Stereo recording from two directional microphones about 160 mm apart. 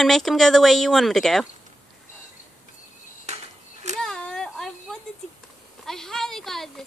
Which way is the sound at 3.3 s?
45° right (ahead or behind).